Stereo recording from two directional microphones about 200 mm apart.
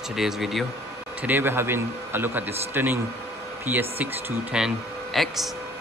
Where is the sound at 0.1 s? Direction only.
Centre (ahead or behind).